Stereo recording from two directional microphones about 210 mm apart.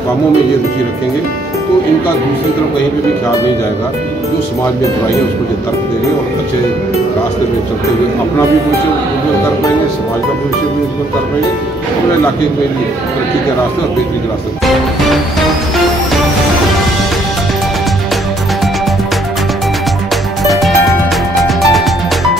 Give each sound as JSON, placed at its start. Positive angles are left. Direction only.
{"t": 20.4, "sound": "music", "side_deg": 0}